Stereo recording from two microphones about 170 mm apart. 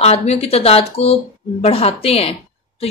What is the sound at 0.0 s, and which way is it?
A woman's voice, 40° left (ahead or behind).